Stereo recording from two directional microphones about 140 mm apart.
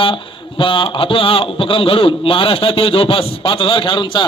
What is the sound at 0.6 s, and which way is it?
A man's voice, 40° left (ahead or behind).